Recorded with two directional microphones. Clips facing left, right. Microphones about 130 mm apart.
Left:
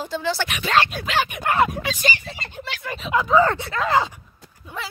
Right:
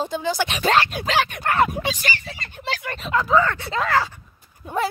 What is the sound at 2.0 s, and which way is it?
Speech, 20° left (ahead or behind).